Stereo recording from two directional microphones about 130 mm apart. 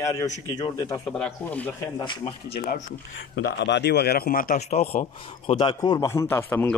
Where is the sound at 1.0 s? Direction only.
5° left (ahead or behind).